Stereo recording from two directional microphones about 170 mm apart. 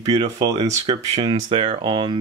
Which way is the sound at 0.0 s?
20° right (ahead or behind).